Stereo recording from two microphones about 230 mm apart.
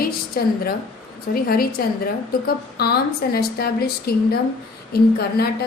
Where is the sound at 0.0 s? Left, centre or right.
Left.